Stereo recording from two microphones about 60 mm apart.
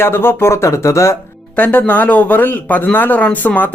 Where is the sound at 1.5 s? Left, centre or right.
Left.